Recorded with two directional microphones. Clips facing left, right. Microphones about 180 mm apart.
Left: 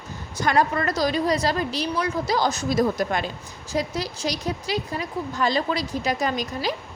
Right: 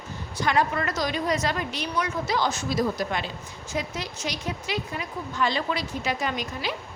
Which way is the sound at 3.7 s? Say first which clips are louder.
Left 5 dB; 35° left (ahead or behind).